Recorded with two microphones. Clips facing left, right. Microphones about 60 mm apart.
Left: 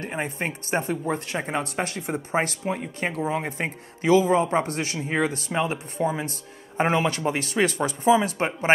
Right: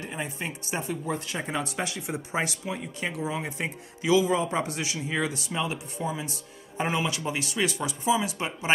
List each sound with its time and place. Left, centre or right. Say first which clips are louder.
0.0 s speech: left 5 dB; left